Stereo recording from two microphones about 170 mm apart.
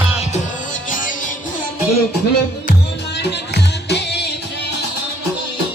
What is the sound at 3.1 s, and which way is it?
Music, 80° left.